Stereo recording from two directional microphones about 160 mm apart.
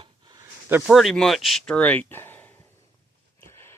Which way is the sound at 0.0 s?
25° right (ahead or behind).